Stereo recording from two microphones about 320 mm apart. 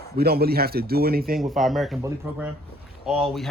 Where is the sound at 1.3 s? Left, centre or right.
Centre.